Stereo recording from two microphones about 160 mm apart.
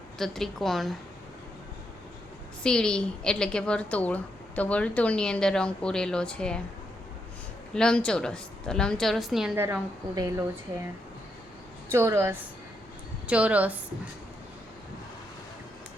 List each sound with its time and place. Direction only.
0.2 s a woman's voice: centre (ahead or behind)
2.6 s a woman's voice: 5° left (ahead or behind)
7.7 s a woman's voice: 5° left (ahead or behind)
10.2 s speech: 20° right (ahead or behind)
11.9 s a woman's voice: 15° right (ahead or behind)